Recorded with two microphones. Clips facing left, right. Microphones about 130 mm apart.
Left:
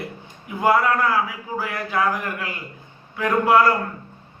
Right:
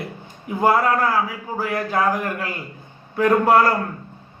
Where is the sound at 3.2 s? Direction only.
40° right (ahead or behind).